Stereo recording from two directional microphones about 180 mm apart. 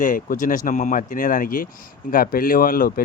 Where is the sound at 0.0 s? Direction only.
45° left (ahead or behind).